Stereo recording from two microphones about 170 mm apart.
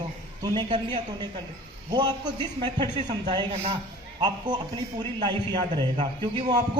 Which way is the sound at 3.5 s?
35° right (ahead or behind).